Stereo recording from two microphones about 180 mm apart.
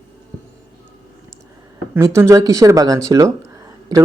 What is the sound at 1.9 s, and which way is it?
Speech, 15° right (ahead or behind).